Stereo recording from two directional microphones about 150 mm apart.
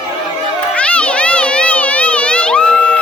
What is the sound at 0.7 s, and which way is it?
Children playing, 10° left (ahead or behind).